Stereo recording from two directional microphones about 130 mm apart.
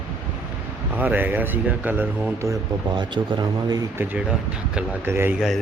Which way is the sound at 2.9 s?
35° right (ahead or behind).